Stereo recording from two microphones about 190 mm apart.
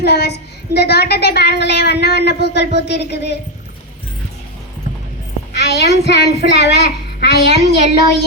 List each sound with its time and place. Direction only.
0.0 s a woman's voice: 60° left (ahead or behind)
5.5 s a woman's voice: 60° left (ahead or behind)